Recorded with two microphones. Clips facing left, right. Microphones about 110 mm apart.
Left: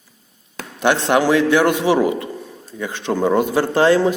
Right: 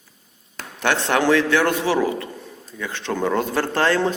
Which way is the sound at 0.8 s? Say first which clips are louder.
Left 3 dB; 15° left (ahead or behind).